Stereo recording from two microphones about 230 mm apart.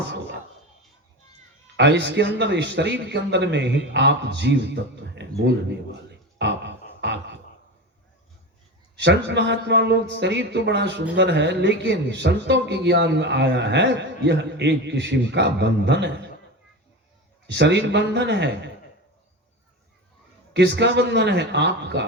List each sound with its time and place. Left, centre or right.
1.7 s speech: right
9.0 s speech: right
17.4 s speech: right
20.5 s speech: right